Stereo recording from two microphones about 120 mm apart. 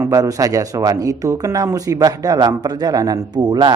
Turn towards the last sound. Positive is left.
turn(degrees=-35)  # may be behind; listen again after turning